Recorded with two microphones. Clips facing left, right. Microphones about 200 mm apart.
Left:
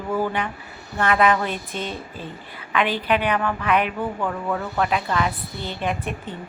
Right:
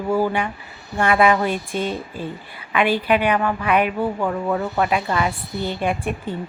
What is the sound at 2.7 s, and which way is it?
A woman's voice, 10° right (ahead or behind).